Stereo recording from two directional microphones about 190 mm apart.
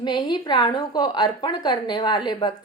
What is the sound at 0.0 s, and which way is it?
A woman's voice, 25° left (ahead or behind).